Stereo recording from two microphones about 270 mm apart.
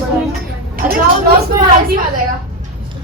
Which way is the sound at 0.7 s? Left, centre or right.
Right.